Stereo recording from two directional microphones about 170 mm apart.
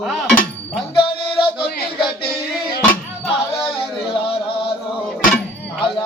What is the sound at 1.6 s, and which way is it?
Music, 65° left (ahead or behind).